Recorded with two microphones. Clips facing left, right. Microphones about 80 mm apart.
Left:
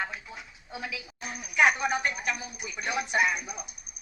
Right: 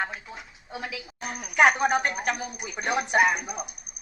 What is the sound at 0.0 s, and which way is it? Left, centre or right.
A woman's voice, right.